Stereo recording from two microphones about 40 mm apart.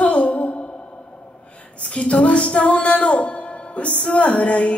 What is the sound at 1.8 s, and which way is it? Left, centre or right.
Music, left.